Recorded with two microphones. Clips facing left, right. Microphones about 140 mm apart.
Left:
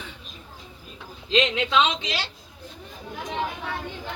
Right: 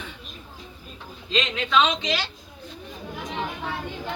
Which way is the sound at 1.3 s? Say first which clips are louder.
Left 2 dB; 20° left (ahead or behind).